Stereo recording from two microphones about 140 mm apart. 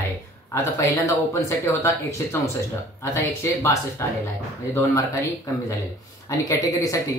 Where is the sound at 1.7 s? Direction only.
20° left (ahead or behind).